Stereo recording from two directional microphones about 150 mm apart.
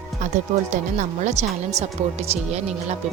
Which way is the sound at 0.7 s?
55° right (ahead or behind).